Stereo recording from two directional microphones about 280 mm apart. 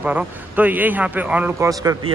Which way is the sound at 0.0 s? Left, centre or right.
Centre.